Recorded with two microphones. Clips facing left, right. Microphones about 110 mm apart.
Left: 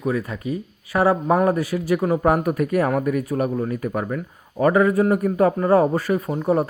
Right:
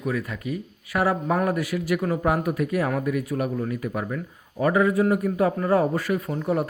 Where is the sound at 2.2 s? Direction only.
45° left (ahead or behind).